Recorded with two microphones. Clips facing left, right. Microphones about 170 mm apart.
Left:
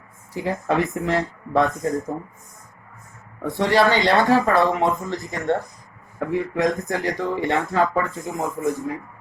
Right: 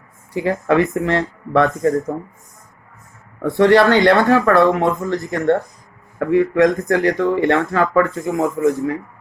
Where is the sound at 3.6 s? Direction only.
60° right (ahead or behind).